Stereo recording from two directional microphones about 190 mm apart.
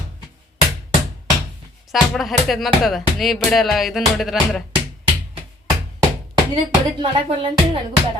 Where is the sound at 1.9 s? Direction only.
Centre (ahead or behind).